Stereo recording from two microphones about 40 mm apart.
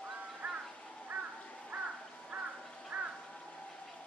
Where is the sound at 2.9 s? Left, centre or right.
Right.